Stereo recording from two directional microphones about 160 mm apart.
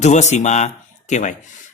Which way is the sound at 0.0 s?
45° left (ahead or behind).